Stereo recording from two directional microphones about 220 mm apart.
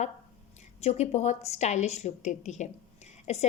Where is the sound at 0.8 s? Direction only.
30° left (ahead or behind).